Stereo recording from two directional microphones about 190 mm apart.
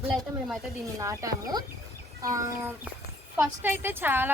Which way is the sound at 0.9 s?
15° right (ahead or behind).